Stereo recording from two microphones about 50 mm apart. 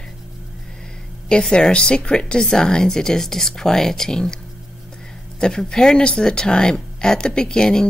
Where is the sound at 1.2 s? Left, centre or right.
Centre.